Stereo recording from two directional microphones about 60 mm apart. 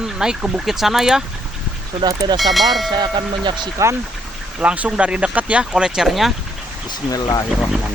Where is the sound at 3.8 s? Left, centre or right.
Right.